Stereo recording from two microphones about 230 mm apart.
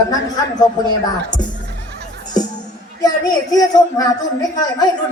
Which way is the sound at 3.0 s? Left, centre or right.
Centre.